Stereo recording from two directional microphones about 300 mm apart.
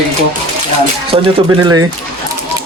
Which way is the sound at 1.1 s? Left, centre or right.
Centre.